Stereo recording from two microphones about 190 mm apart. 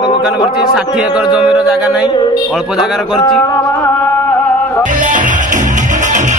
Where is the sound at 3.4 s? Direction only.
15° left (ahead or behind).